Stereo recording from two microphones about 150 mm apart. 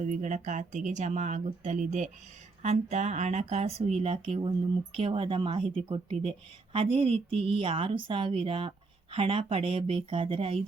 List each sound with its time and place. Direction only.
0.0 s a woman's voice: 55° right (ahead or behind); by 10.6 s 35° right (ahead or behind)